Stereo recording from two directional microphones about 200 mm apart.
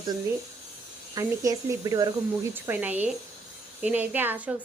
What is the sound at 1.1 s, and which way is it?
A woman's voice, 15° right (ahead or behind).